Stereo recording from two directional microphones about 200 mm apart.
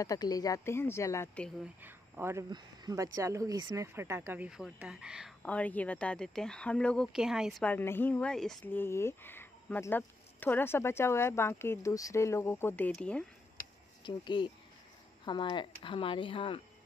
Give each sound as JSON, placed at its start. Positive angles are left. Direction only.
{"t": 0.0, "sound": "speech", "side_deg": 20}
{"t": 1.8, "sound": "speech", "side_deg": -10}
{"t": 14.0, "sound": "speech", "side_deg": 25}